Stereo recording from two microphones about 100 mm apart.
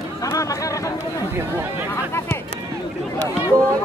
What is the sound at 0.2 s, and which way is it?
Chatter, 35° left (ahead or behind).